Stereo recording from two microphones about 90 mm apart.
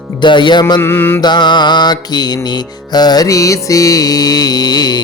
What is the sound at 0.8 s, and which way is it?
Mantra, 25° left (ahead or behind).